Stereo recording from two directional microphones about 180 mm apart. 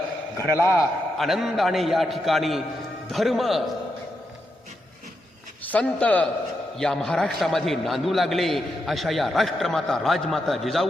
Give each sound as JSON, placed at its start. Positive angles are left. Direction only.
{"t": 0.3, "sound": "a man's voice", "side_deg": 15}
{"t": 1.2, "sound": "a man's voice", "side_deg": 0}
{"t": 5.6, "sound": "a man's voice", "side_deg": 5}